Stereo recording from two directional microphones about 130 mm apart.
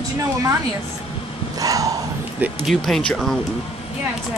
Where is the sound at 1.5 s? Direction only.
25° right (ahead or behind).